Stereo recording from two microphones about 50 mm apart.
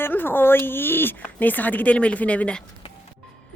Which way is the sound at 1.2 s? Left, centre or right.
Left.